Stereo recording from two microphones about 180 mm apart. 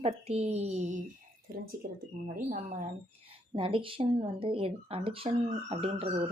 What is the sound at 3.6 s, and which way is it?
Speech, 30° right (ahead or behind).